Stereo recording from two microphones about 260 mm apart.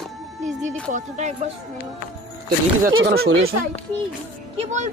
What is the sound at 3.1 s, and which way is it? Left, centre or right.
Speech, right.